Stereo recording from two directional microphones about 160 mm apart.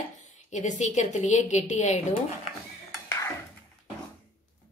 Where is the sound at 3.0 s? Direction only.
20° left (ahead or behind).